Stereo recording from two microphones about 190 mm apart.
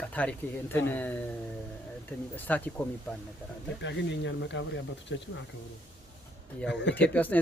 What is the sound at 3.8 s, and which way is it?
Speech, 70° left (ahead or behind).